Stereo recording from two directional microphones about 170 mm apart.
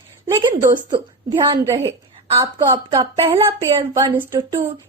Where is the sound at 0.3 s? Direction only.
25° right (ahead or behind).